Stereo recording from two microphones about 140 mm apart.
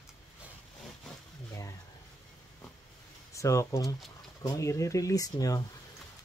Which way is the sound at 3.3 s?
20° left (ahead or behind).